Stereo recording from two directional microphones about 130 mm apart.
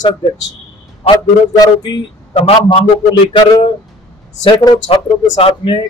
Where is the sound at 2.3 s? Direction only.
50° left (ahead or behind).